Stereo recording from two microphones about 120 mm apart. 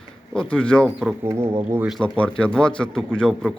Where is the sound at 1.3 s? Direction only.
20° right (ahead or behind).